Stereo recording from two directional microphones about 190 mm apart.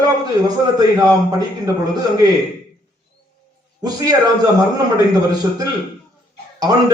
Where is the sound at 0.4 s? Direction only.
20° right (ahead or behind).